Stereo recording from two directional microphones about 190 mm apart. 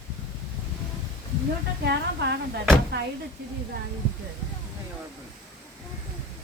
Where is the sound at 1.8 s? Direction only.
60° right (ahead or behind).